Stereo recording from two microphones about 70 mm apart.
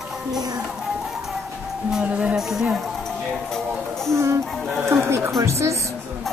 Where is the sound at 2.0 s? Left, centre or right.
Centre.